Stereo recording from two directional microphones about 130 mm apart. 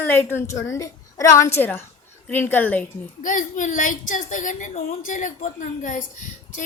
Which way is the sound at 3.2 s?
80° left.